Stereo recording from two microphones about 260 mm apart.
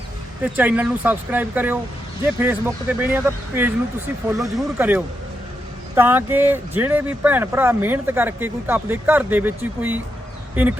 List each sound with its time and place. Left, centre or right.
0.4 s speech: centre